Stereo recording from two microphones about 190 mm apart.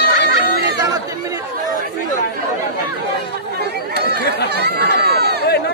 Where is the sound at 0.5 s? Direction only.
60° right (ahead or behind).